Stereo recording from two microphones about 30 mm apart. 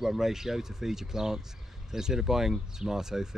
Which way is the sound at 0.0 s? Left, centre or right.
Centre.